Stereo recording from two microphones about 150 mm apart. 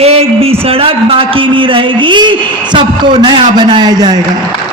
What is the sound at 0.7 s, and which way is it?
A man's voice, 40° right (ahead or behind).